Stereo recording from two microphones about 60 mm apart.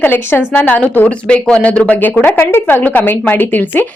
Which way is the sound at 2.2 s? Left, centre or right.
Left.